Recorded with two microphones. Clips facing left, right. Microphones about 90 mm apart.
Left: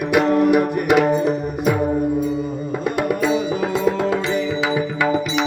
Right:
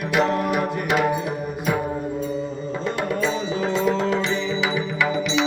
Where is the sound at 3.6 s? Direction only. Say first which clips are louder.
Left 2 dB; 25° right (ahead or behind).